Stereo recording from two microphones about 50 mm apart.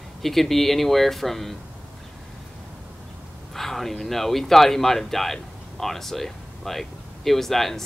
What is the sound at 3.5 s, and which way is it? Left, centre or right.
Speech, centre.